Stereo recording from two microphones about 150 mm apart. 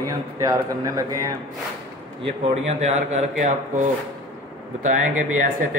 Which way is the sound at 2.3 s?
45° right (ahead or behind).